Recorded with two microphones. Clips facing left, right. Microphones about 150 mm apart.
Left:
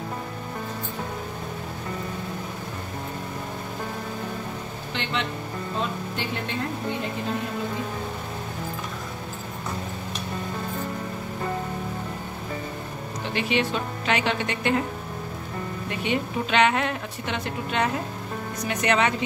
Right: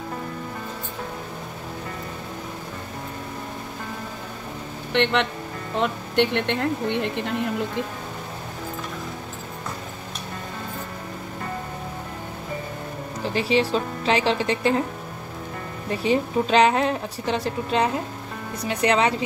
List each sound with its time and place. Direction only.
4.9 s speech: 65° right (ahead or behind)
13.2 s a woman's voice: 35° right (ahead or behind)
15.9 s a woman's voice: 35° right (ahead or behind)